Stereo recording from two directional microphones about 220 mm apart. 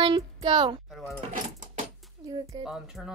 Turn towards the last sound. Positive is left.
turn(degrees=0)  # may be behind; listen again after turning